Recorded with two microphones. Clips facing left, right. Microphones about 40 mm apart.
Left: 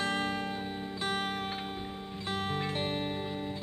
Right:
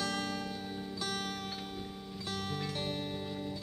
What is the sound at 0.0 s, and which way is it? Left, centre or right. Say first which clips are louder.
Music: left 4 dB; left.